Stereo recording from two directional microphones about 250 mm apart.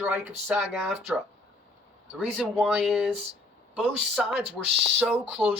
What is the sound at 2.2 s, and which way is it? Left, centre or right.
Speech, centre.